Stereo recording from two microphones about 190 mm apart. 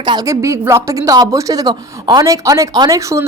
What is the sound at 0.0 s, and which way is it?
A woman's voice, 20° right (ahead or behind).